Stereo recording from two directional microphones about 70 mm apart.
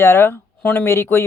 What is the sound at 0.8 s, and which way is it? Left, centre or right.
Speech, left.